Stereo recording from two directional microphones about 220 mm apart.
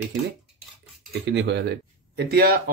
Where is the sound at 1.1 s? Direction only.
50° right (ahead or behind).